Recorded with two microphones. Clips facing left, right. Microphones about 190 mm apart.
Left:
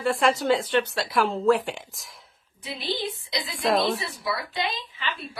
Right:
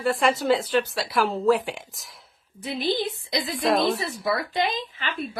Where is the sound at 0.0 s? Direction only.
Centre (ahead or behind).